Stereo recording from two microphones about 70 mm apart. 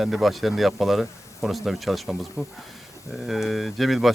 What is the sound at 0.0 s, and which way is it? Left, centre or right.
Speech, centre.